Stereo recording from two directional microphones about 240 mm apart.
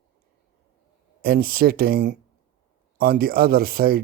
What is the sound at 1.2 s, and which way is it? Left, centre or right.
Speech, right.